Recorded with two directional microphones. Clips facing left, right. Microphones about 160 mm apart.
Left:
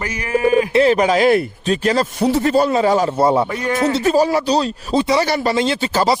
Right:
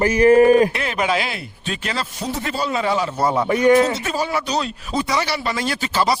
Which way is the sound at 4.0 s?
35° left (ahead or behind).